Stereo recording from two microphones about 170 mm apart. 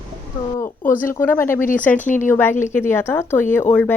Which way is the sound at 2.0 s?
50° left (ahead or behind).